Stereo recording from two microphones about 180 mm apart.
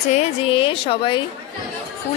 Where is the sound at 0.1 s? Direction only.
30° left (ahead or behind).